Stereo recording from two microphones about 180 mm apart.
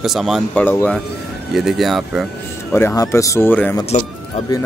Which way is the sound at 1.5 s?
Centre (ahead or behind).